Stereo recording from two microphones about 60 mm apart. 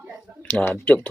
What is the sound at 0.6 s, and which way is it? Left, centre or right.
Speech, left.